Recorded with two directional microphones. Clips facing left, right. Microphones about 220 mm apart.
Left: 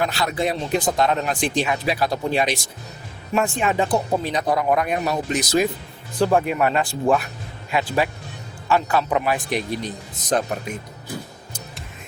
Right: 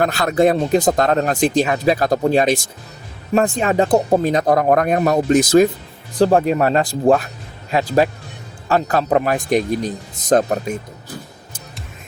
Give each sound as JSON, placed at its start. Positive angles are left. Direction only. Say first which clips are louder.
{"t": 0.0, "sound": "speech", "louder": "right 7 dB", "side_deg": -50}
{"t": 6.1, "sound": "speech", "louder": "right 5 dB", "side_deg": -35}